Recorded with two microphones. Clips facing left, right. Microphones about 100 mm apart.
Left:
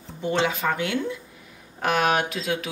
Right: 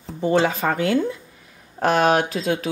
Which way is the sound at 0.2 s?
35° right (ahead or behind).